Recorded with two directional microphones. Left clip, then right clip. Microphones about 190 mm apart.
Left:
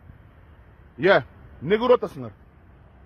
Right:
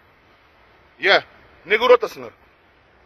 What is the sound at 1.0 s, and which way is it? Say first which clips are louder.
A man's voice: right 2 dB; 35° left (ahead or behind).